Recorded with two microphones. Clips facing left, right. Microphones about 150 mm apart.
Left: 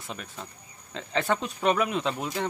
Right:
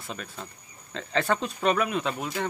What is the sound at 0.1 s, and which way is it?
Speech, 15° left (ahead or behind).